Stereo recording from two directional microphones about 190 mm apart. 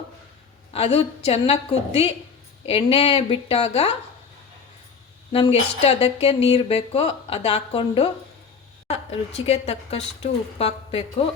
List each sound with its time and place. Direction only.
0.7 s speech: 30° left (ahead or behind)
5.3 s speech: 30° left (ahead or behind)